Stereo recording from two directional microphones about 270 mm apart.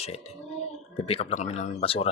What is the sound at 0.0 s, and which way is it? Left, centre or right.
Speech, left.